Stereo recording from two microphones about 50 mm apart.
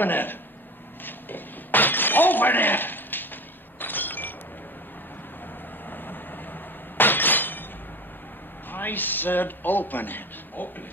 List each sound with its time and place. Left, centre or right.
0.0 s speech: left
1.0 s breaking: left
3.8 s a sound: left
7.0 s glass: left
8.7 s a man's voice: left